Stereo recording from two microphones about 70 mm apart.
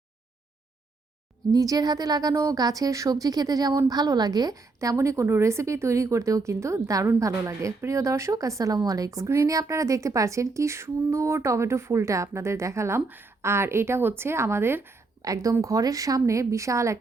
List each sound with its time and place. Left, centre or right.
1.5 s a woman's voice: right
2.6 s a woman's voice: right
4.5 s speech: right
13.1 s a woman's voice: right
15.2 s a woman's voice: right